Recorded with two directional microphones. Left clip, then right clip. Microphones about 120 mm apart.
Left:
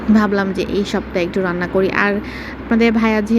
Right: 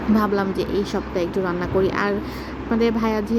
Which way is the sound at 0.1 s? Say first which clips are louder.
Left 5 dB; 30° left (ahead or behind).